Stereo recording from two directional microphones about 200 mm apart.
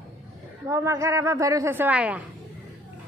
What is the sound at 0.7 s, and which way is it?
A woman's voice, 15° right (ahead or behind).